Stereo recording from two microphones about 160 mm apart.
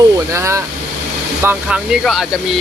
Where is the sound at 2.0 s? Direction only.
Centre (ahead or behind).